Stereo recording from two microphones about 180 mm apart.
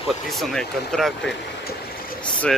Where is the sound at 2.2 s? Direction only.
5° left (ahead or behind).